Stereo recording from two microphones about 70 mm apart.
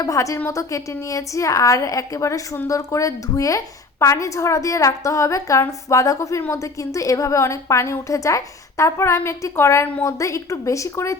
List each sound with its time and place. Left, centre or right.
0.0 s a woman's voice: left